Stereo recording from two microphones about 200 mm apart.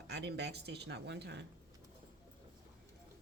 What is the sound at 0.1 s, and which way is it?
Speech, 55° right (ahead or behind).